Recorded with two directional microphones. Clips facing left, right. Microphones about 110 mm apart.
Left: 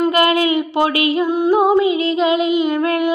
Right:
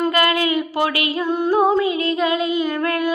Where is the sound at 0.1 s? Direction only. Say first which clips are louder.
Left 4 dB; 25° left (ahead or behind).